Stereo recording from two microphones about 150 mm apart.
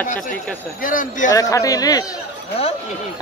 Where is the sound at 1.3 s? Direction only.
20° left (ahead or behind).